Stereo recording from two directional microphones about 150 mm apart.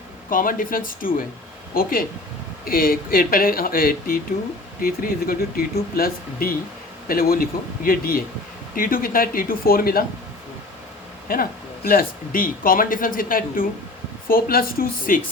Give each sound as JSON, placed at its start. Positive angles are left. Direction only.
{"t": 0.3, "sound": "speech", "side_deg": 65}
{"t": 11.3, "sound": "speech", "side_deg": 75}